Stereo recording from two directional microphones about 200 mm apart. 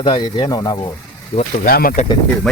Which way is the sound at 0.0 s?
25° left (ahead or behind).